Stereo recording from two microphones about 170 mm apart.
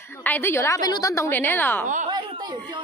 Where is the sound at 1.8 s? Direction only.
45° right (ahead or behind).